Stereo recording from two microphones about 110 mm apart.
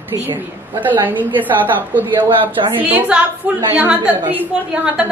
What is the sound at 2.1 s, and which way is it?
Speech, 50° right (ahead or behind).